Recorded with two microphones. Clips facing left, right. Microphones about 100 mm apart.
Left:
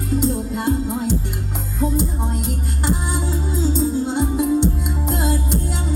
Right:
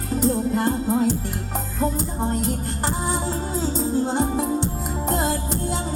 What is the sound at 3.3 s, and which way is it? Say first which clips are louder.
Music: left 3 dB; 40° right (ahead or behind).